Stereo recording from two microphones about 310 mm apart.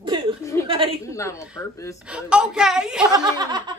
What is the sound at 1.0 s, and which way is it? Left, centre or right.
Speech, centre.